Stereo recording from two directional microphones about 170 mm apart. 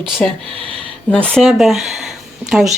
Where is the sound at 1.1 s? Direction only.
5° left (ahead or behind).